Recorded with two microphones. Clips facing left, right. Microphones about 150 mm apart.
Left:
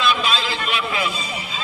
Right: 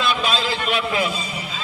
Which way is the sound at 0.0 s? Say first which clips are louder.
Even; 45° right (ahead or behind).